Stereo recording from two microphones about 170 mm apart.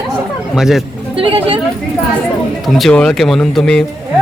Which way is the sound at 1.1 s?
30° right (ahead or behind).